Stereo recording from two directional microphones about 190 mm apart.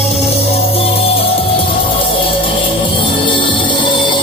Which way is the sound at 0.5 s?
30° left (ahead or behind).